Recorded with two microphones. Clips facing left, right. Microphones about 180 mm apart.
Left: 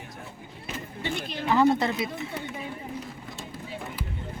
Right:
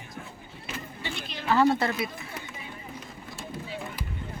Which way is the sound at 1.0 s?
50° left (ahead or behind).